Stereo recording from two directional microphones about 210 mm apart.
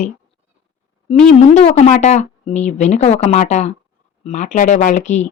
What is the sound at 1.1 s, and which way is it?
Speech, 30° left (ahead or behind).